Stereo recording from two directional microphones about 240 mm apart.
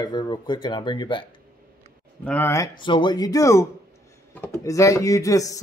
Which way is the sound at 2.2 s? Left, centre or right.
Centre.